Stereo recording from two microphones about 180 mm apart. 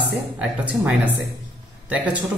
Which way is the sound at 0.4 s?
10° right (ahead or behind).